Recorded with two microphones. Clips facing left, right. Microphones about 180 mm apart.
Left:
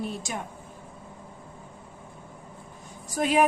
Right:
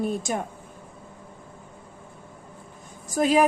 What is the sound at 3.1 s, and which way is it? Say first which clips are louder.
Speech: right 3 dB; 40° right (ahead or behind).